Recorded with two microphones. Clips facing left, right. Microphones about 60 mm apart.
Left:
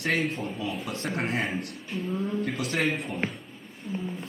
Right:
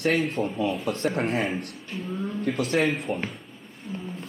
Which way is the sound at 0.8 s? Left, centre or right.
Right.